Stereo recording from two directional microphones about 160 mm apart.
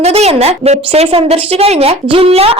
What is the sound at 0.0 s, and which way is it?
A woman's voice, 40° right (ahead or behind).